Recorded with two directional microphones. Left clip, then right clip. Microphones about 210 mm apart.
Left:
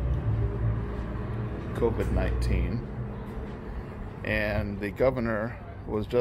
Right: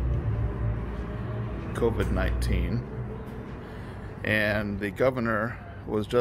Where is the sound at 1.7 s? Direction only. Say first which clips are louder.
Right 1 dB; 15° right (ahead or behind).